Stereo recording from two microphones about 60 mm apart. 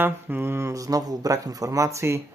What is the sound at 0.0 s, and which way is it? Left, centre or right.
Speech, right.